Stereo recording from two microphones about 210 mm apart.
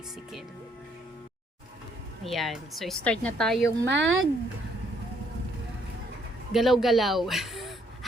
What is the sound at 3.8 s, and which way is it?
Speech, 60° right (ahead or behind).